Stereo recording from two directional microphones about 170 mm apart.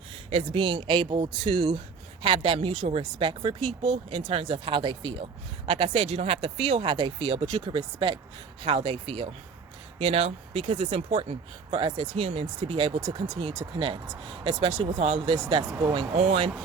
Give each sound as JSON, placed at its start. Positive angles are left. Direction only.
{"t": 0.3, "sound": "speech", "side_deg": -35}